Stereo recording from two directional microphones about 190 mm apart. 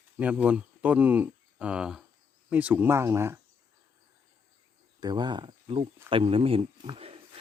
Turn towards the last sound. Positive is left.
turn(degrees=-30)  # may be behind; listen again after turning